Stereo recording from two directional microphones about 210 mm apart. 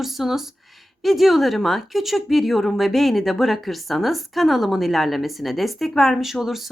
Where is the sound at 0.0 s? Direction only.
Centre (ahead or behind).